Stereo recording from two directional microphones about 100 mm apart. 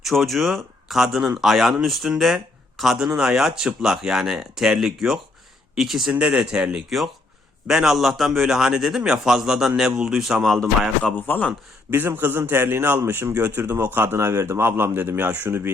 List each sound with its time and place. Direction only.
0.0 s a man's voice: centre (ahead or behind)
11.9 s speech: 20° right (ahead or behind)